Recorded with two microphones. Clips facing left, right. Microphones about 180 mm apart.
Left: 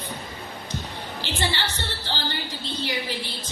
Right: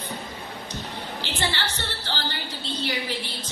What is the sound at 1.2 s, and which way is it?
A woman's voice, 15° left (ahead or behind).